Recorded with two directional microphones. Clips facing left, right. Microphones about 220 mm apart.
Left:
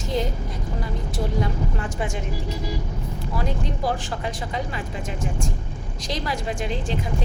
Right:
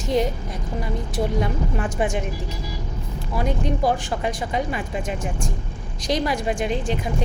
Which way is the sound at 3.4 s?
15° right (ahead or behind).